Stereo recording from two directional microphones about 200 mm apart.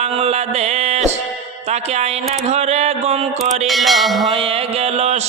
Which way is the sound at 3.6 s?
Centre (ahead or behind).